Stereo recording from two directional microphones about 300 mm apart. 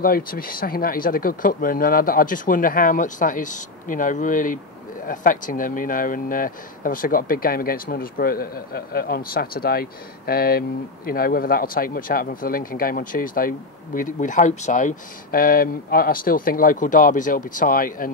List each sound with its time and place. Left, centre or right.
0.0 s speech: left